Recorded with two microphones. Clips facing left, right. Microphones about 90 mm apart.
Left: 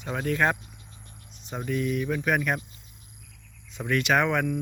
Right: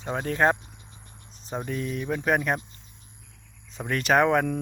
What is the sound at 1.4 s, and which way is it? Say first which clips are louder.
Speech: left 2 dB; 30° right (ahead or behind).